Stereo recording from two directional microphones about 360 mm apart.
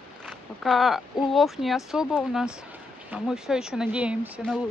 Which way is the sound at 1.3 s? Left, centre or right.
Centre.